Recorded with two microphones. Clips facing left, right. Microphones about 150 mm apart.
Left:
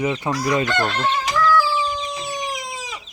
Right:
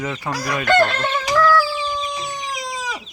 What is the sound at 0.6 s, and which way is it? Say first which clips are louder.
Fowl: right 4 dB; 60° right (ahead or behind).